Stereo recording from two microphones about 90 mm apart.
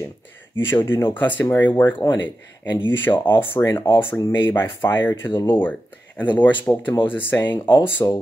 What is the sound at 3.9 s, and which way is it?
Speech, 60° left (ahead or behind).